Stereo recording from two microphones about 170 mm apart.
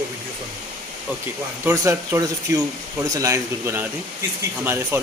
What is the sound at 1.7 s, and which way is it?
A man's voice, 20° right (ahead or behind).